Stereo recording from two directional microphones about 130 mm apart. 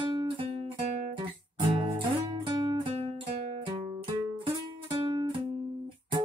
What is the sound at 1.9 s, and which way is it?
Music, 35° right (ahead or behind).